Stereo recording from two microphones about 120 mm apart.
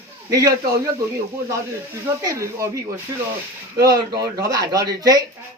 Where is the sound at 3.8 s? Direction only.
30° right (ahead or behind).